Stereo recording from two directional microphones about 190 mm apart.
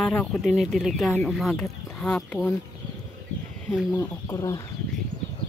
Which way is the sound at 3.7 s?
5° right (ahead or behind).